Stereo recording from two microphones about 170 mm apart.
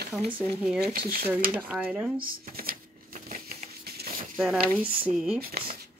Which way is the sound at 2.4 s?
60° right (ahead or behind).